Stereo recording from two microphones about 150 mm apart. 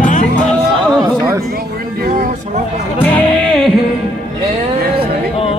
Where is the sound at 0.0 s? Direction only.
55° left (ahead or behind).